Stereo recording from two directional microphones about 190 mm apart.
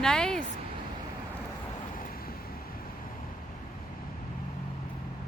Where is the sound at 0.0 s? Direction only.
5° left (ahead or behind).